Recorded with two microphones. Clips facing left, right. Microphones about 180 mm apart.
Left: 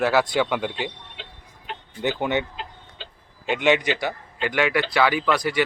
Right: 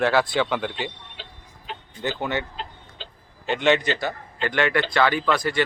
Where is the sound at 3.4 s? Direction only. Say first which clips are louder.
Even; 10° left (ahead or behind).